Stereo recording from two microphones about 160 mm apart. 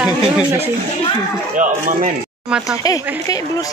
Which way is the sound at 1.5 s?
50° right (ahead or behind).